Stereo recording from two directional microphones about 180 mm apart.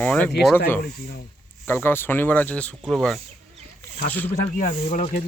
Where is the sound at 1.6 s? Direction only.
10° left (ahead or behind).